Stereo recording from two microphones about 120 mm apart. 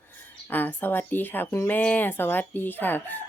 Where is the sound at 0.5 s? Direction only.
15° left (ahead or behind).